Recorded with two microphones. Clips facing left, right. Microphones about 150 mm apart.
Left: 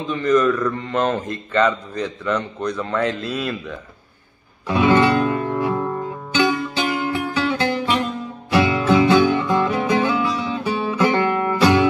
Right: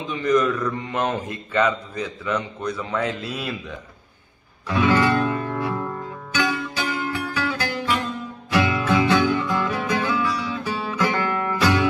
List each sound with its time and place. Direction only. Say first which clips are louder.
0.0 s speech: left 3 dB; 10° right (ahead or behind)
4.6 s music: left 4 dB; 20° left (ahead or behind)